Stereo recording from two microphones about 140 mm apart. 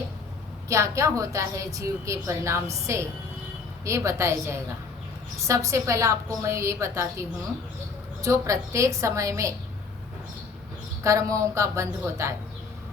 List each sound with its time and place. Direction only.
0.7 s a woman's voice: 20° right (ahead or behind)
11.0 s a woman's voice: 20° right (ahead or behind)